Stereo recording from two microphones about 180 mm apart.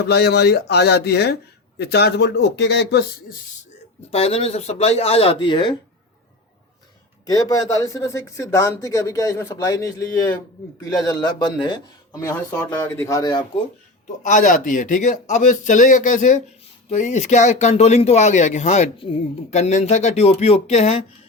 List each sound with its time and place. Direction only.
0.1 s speech: 65° left (ahead or behind)
4.1 s speech: 35° left (ahead or behind)
7.3 s speech: 20° left (ahead or behind)
14.2 s a man's voice: 45° left (ahead or behind)